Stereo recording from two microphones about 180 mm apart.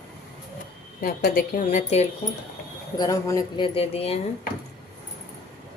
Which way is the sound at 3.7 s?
35° left (ahead or behind).